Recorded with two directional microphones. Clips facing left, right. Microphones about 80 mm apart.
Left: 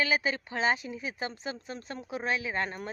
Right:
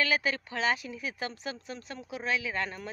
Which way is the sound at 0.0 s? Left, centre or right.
Centre.